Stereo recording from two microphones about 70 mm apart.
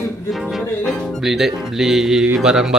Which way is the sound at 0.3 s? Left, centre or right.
Centre.